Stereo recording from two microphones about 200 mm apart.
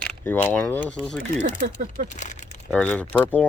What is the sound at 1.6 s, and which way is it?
Speech, 35° right (ahead or behind).